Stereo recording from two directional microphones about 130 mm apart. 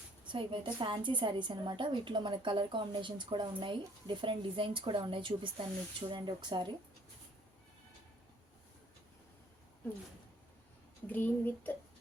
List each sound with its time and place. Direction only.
0.3 s a woman's voice: 40° right (ahead or behind)
11.0 s speech: 15° left (ahead or behind)